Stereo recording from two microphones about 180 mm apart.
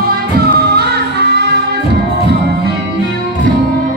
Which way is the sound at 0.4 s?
60° right (ahead or behind).